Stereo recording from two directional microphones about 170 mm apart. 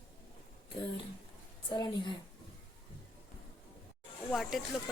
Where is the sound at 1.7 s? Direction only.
25° left (ahead or behind).